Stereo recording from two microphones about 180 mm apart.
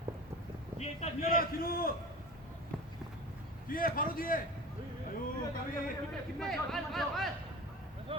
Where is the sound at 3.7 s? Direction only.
50° left (ahead or behind).